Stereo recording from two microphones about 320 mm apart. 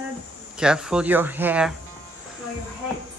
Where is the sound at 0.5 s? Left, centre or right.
Centre.